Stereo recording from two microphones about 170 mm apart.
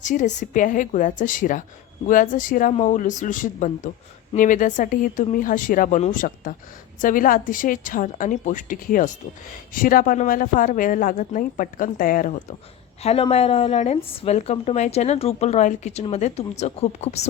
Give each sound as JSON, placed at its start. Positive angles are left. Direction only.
{"t": 0.0, "sound": "speech", "side_deg": 45}
{"t": 13.0, "sound": "speech", "side_deg": 35}